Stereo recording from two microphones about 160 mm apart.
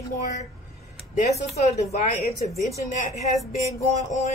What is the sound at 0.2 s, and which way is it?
Speech, 50° left (ahead or behind).